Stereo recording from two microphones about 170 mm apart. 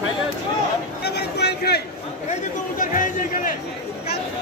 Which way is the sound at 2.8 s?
50° left (ahead or behind).